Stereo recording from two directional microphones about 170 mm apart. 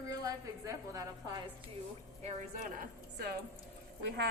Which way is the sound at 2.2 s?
55° right (ahead or behind).